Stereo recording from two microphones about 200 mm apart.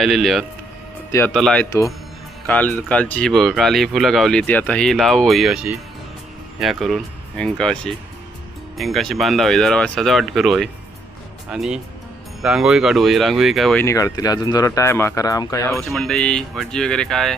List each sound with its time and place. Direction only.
0.0 s speech: centre (ahead or behind)
13.8 s speech: 15° left (ahead or behind)
15.9 s speech: centre (ahead or behind)